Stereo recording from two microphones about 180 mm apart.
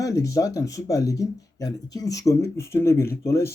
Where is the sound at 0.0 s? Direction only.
15° left (ahead or behind).